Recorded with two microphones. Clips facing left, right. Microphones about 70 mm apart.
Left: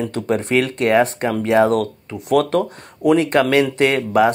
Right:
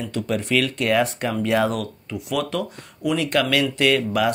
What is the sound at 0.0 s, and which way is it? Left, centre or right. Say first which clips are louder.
Speech: left 5 dB; left.